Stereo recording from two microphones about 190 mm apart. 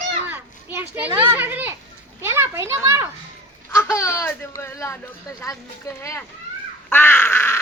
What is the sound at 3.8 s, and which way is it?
Speech, 15° left (ahead or behind).